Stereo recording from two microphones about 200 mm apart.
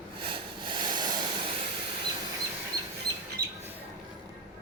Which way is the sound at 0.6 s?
20° right (ahead or behind).